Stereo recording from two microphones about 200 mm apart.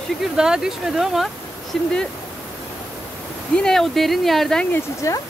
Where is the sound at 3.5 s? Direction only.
5° left (ahead or behind).